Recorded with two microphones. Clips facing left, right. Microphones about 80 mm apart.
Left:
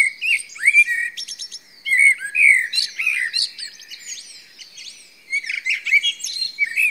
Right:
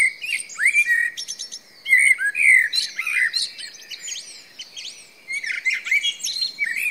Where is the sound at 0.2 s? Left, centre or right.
Right.